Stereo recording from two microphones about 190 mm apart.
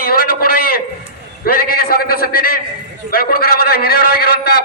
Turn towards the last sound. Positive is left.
turn(degrees=55)  # may be behind; listen again after turning